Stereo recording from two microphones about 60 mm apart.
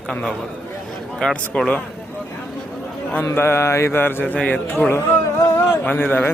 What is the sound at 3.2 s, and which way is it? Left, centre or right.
Mantra, left.